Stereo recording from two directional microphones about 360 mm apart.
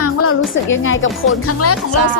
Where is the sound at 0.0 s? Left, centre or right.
Left.